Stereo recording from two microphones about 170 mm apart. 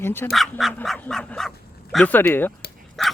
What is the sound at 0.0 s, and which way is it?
Speech, 15° left (ahead or behind).